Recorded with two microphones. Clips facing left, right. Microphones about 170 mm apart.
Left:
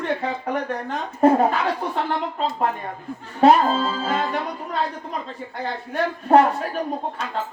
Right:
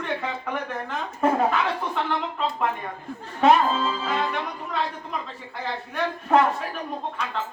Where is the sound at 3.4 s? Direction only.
35° left (ahead or behind).